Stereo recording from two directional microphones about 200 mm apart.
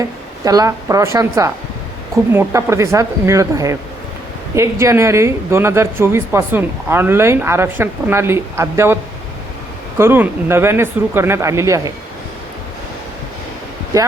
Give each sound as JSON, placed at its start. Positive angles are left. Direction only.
{"t": 0.0, "sound": "a woman's voice", "side_deg": -15}
{"t": 10.0, "sound": "a woman's voice", "side_deg": -10}